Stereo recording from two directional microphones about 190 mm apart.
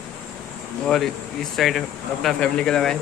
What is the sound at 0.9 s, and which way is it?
Speech, centre (ahead or behind).